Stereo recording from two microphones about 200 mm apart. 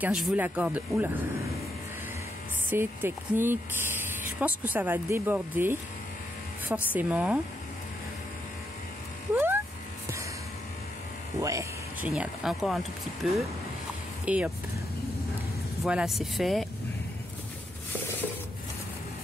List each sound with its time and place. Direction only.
0.0 s speech: 5° right (ahead or behind)
2.7 s speech: 10° right (ahead or behind)
9.3 s a sound: 10° right (ahead or behind)
11.4 s vehicle: 15° right (ahead or behind)
12.1 s speech: centre (ahead or behind)
15.8 s speech: centre (ahead or behind)